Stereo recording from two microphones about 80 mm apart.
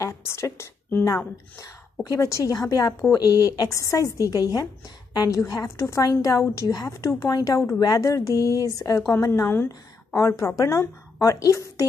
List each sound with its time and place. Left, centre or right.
0.0 s a sound: left
1.0 s a woman's voice: left
5.5 s speech: left
6.4 s speech: left